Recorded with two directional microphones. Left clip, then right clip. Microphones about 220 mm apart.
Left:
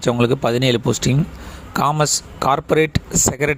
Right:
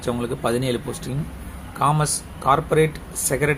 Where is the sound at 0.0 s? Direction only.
40° left (ahead or behind).